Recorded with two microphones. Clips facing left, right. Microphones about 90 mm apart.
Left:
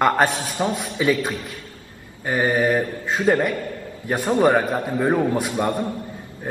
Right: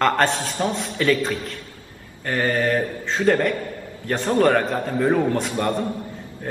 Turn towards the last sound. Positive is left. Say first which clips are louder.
# left 1 dB
turn(degrees=15)  # may be behind; listen again after turning